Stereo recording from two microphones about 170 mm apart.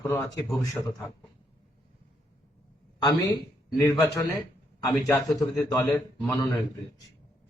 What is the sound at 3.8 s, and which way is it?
Speech, 20° left (ahead or behind).